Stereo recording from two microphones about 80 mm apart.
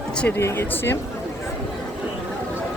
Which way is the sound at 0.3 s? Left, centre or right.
Left.